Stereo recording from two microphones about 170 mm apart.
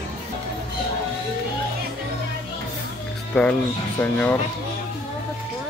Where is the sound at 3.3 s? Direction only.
5° left (ahead or behind).